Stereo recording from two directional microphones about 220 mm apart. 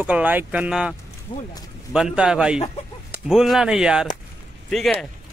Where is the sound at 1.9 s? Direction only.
5° right (ahead or behind).